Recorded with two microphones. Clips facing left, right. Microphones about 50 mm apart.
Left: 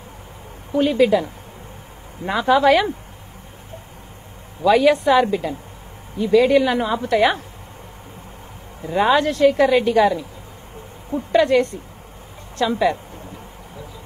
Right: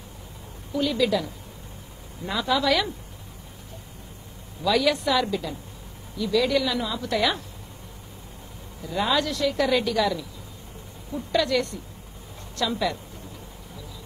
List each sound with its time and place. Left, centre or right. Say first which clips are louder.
0.7 s a woman's voice: left 8 dB; left
4.6 s a woman's voice: left 8 dB; left
8.8 s a woman's voice: left 8 dB; left